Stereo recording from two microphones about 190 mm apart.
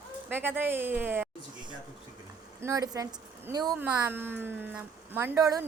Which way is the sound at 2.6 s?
15° right (ahead or behind).